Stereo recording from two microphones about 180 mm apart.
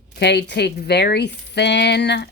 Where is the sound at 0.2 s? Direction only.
70° left (ahead or behind).